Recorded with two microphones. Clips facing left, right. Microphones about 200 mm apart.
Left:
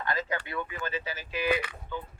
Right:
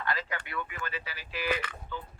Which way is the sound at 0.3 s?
25° left (ahead or behind).